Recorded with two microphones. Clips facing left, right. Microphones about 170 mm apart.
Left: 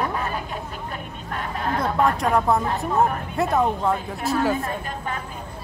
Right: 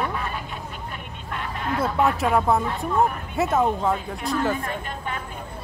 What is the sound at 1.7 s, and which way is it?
Speech, 5° right (ahead or behind).